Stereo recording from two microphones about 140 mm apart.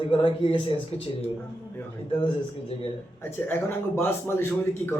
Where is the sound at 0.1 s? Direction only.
35° left (ahead or behind).